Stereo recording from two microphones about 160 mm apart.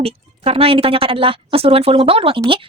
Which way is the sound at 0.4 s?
35° right (ahead or behind).